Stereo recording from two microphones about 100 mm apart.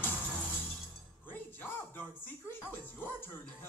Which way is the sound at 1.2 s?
20° left (ahead or behind).